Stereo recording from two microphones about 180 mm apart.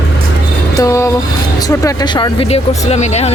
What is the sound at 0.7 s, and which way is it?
Speech, 15° left (ahead or behind).